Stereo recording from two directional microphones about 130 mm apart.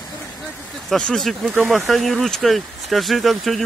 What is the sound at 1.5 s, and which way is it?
Speech, 15° right (ahead or behind).